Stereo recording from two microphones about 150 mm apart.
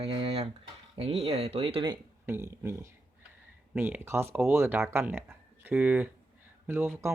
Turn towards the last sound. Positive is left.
turn(degrees=-15)  # may be behind; listen again after turning